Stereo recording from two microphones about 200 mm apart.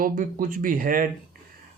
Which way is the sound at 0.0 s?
45° right (ahead or behind).